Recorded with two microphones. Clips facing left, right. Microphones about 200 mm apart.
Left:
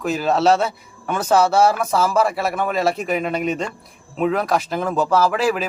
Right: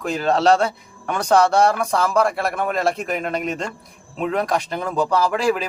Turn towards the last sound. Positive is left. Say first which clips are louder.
# left 1 dB
turn(degrees=5)  # may be behind; listen again after turning